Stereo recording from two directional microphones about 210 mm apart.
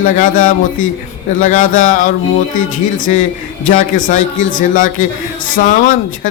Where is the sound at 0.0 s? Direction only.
40° left (ahead or behind).